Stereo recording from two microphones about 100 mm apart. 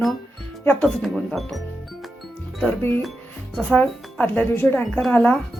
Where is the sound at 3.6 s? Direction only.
5° left (ahead or behind).